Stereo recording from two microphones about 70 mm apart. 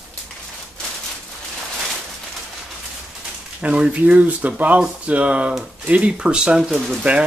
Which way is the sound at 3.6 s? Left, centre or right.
Centre.